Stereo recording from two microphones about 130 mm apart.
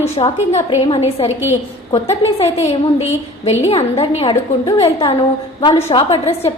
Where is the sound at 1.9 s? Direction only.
45° left (ahead or behind).